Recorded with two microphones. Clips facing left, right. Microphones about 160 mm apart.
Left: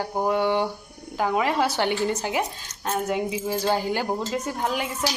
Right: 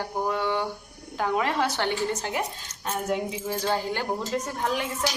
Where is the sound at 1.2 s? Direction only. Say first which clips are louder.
Left 3 dB; 5° left (ahead or behind).